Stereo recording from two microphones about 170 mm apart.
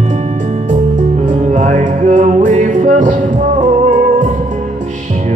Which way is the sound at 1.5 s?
45° right (ahead or behind).